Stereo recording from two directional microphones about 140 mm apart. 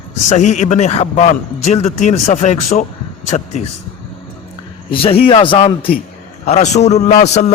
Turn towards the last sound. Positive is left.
turn(degrees=55)  # may be behind; listen again after turning